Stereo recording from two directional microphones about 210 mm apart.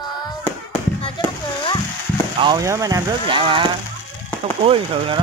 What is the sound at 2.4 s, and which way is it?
Speech, 20° right (ahead or behind).